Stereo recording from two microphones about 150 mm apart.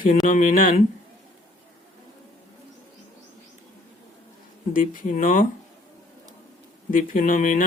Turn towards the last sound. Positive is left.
turn(degrees=60)  # may be behind; listen again after turning